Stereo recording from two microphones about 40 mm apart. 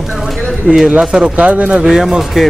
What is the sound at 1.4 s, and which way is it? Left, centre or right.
Speech, right.